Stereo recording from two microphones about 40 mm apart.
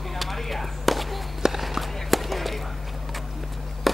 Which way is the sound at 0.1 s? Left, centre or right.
Centre.